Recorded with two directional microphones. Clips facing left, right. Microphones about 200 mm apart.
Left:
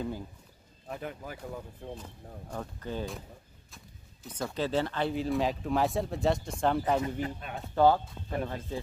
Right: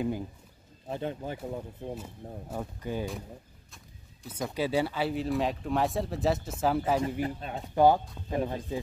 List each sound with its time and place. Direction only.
0.8 s speech: 30° right (ahead or behind)
2.5 s speech: 10° right (ahead or behind)
3.7 s bird: 5° right (ahead or behind)
4.5 s speech: 10° right (ahead or behind)
7.2 s speech: 30° right (ahead or behind)
7.7 s speech: 15° right (ahead or behind)